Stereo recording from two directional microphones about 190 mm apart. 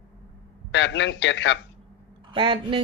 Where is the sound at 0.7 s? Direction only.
70° left (ahead or behind).